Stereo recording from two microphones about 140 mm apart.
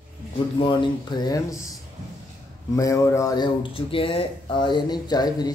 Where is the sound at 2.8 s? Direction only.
20° left (ahead or behind).